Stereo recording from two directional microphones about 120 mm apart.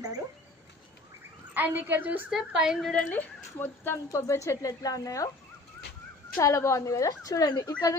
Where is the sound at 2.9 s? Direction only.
10° left (ahead or behind); by 5.3 s 30° left (ahead or behind).